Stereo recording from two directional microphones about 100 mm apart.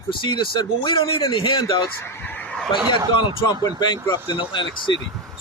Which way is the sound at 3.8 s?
45° left (ahead or behind).